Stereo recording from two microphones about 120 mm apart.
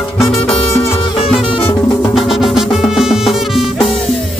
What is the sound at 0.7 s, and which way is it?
Music, 25° left (ahead or behind).